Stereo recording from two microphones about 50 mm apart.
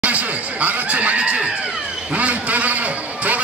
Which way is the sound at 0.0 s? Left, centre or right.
Right.